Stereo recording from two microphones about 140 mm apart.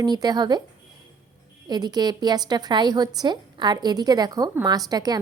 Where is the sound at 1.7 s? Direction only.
30° right (ahead or behind).